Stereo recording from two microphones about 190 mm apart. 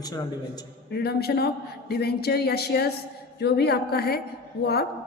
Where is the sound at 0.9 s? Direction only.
55° left (ahead or behind).